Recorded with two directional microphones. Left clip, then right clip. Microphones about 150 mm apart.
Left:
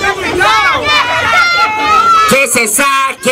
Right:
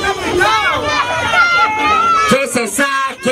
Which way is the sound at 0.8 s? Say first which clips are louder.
Left 5 dB; 25° left (ahead or behind).